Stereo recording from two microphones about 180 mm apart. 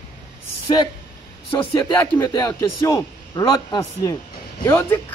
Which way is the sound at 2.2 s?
20° left (ahead or behind).